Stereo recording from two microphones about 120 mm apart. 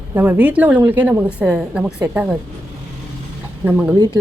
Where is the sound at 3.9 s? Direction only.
35° right (ahead or behind).